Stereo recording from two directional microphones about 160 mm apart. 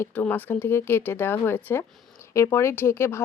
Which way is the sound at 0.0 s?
10° left (ahead or behind).